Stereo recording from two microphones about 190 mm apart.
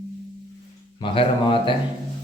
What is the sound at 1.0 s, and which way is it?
Speech, 25° left (ahead or behind).